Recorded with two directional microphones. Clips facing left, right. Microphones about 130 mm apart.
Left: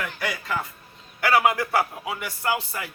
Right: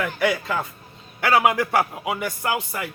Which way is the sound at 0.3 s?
25° right (ahead or behind).